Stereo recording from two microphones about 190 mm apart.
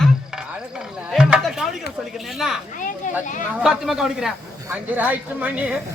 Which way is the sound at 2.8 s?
45° left (ahead or behind).